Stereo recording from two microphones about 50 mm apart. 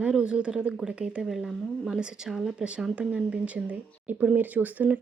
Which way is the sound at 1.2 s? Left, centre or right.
Centre.